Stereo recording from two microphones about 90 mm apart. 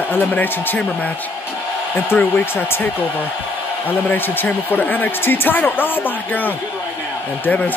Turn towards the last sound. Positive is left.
turn(degrees=15)  # may be behind; listen again after turning